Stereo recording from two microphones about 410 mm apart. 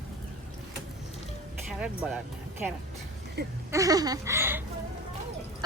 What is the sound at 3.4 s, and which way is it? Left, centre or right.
Speech, right.